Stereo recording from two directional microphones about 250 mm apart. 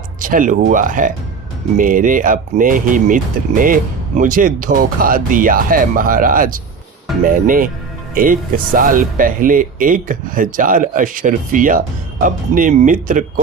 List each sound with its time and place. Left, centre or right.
0.2 s speech: right